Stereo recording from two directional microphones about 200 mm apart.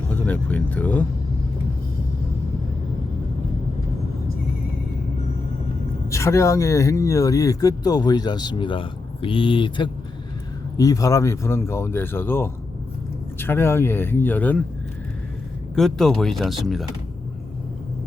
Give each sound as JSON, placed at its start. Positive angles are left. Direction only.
{"t": 0.1, "sound": "speech", "side_deg": 10}
{"t": 6.1, "sound": "speech", "side_deg": 15}
{"t": 15.7, "sound": "speech", "side_deg": 0}